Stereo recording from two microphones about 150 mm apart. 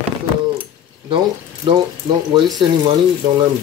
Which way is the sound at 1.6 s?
30° right (ahead or behind).